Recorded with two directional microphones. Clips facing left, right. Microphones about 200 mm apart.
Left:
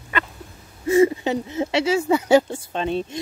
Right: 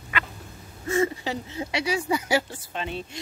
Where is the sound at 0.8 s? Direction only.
20° left (ahead or behind).